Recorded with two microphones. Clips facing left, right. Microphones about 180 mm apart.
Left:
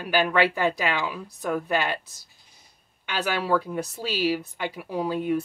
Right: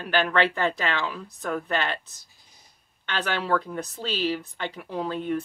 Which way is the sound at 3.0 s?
10° left (ahead or behind).